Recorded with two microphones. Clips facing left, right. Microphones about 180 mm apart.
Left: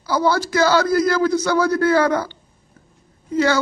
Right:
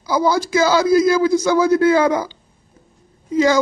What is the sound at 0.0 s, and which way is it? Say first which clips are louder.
A man's voice: right 1 dB; 10° right (ahead or behind).